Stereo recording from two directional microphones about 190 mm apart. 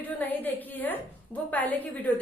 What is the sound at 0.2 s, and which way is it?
A woman's voice, 10° left (ahead or behind).